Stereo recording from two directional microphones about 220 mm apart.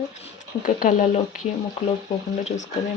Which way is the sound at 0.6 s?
40° left (ahead or behind).